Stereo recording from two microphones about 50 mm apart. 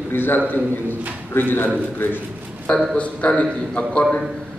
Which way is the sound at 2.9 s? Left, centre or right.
Left.